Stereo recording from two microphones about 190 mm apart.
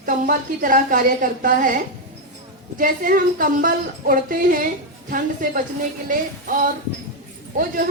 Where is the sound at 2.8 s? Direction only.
45° right (ahead or behind).